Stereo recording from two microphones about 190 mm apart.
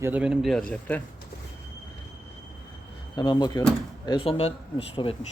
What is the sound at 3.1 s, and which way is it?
Speech, 25° left (ahead or behind).